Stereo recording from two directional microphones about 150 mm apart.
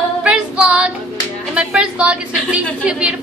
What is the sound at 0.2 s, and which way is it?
Child singing, 5° right (ahead or behind).